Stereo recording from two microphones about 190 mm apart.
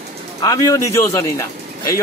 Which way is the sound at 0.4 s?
20° left (ahead or behind).